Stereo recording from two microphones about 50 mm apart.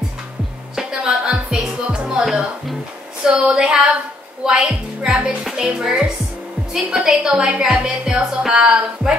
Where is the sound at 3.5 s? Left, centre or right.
Centre.